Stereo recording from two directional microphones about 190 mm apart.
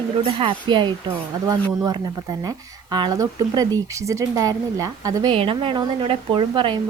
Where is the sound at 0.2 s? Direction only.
30° right (ahead or behind).